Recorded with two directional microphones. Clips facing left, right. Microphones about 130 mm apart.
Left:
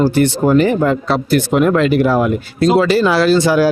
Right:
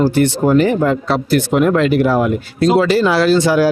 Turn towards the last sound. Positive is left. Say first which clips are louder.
# even
turn(degrees=20)  # may be behind; listen again after turning